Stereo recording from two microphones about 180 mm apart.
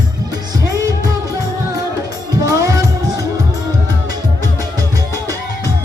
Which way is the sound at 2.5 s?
20° right (ahead or behind).